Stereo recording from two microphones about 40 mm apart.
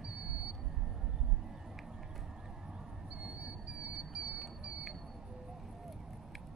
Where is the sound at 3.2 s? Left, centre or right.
Right.